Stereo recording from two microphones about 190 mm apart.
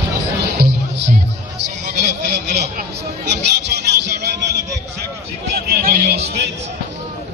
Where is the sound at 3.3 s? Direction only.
65° right (ahead or behind).